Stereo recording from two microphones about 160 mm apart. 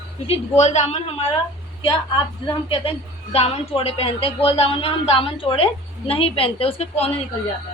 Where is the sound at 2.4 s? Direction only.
35° left (ahead or behind).